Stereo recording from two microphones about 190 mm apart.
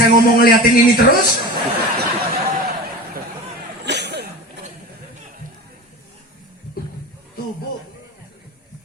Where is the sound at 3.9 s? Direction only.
65° right (ahead or behind).